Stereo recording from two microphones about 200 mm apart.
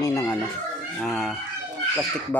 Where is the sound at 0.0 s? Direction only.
15° left (ahead or behind).